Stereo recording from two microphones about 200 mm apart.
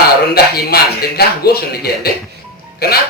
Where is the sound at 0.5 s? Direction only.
50° left (ahead or behind).